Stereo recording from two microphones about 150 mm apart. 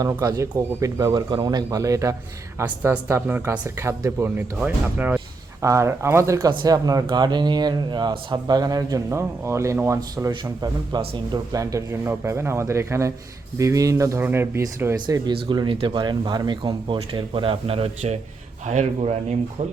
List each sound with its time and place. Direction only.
0.0 s speech: 25° right (ahead or behind)
15.4 s speech: 35° right (ahead or behind)